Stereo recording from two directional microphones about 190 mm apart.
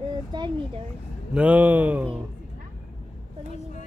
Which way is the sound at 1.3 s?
5° right (ahead or behind).